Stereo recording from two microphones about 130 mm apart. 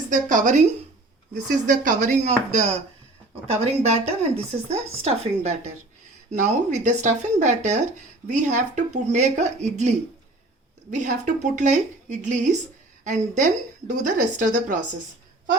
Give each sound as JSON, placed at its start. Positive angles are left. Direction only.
{"t": 0.1, "sound": "a woman's voice", "side_deg": -85}
{"t": 1.6, "sound": "a woman's voice", "side_deg": -80}
{"t": 10.9, "sound": "a woman's voice", "side_deg": -70}